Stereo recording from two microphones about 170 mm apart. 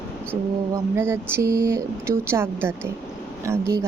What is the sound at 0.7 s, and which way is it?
Speech, 15° right (ahead or behind).